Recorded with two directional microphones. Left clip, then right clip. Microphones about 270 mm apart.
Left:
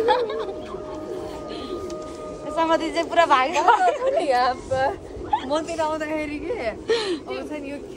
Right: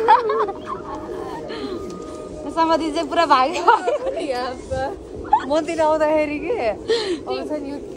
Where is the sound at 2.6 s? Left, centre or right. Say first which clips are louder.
Right 3 dB; centre.